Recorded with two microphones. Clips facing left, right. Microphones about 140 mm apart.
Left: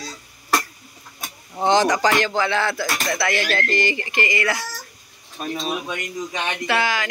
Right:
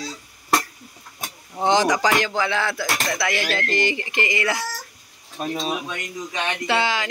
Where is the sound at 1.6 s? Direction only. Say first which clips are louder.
Left 1 dB; 15° right (ahead or behind).